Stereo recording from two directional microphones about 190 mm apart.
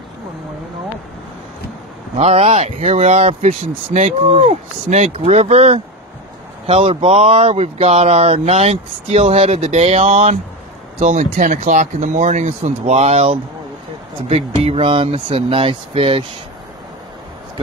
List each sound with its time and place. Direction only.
2.1 s speech: 35° right (ahead or behind)